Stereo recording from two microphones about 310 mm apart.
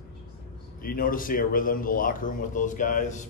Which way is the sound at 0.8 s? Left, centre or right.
Left.